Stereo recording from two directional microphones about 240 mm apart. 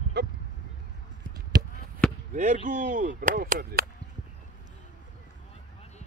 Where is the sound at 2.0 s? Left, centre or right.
Centre.